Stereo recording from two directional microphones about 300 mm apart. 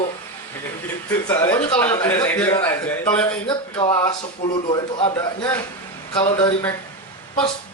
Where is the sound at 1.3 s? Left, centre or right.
Centre.